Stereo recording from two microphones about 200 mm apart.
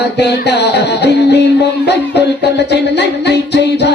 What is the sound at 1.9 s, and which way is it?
Music, 55° left (ahead or behind).